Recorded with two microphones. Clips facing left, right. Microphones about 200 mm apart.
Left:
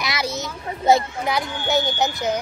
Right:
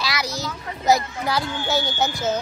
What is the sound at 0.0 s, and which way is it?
A child's voice, 25° left (ahead or behind).